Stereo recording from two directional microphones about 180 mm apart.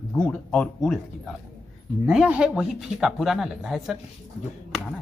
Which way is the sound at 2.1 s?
5° right (ahead or behind).